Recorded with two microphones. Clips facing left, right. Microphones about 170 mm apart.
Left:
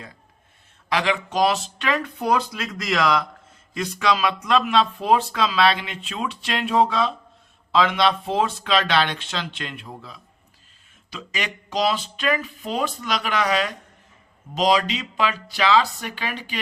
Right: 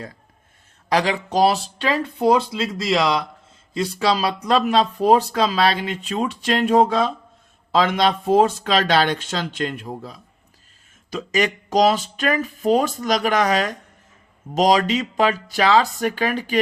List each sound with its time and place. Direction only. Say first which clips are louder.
0.9 s speech: right 3 dB; 40° right (ahead or behind)